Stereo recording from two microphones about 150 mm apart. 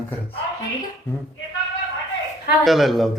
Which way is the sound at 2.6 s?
Centre (ahead or behind).